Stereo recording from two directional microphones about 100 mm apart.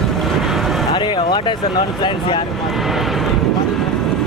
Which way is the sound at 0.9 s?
50° left (ahead or behind).